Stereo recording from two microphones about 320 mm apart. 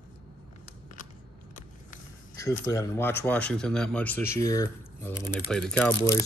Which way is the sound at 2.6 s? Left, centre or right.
Centre.